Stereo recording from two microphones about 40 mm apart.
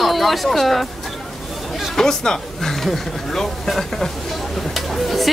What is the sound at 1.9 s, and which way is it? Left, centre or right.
A woman's voice, centre.